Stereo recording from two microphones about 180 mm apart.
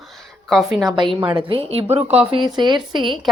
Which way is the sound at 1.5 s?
35° right (ahead or behind).